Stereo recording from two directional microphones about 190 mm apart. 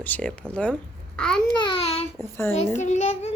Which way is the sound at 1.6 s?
30° left (ahead or behind).